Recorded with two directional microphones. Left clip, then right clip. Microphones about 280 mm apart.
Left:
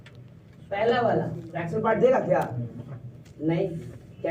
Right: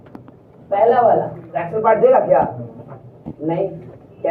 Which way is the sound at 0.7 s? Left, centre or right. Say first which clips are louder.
Right 10 dB; left.